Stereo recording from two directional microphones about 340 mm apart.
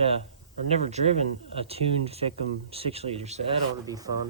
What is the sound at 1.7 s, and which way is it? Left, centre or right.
Speech, centre.